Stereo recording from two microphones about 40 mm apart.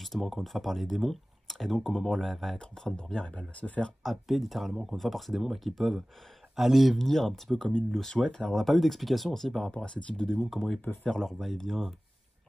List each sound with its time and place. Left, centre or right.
0.0 s speech: centre
2.6 s speech: centre
3.0 s speech: left
4.0 s speech: centre
8.5 s speech: centre
9.8 s speech: left
11.1 s speech: centre